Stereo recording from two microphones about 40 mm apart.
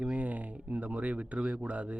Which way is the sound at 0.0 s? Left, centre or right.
Right.